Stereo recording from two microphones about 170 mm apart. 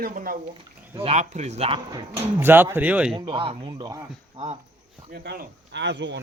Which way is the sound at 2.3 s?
10° right (ahead or behind).